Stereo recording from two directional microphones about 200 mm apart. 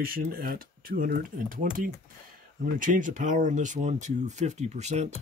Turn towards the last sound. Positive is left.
turn(degrees=-35)  # may be behind; listen again after turning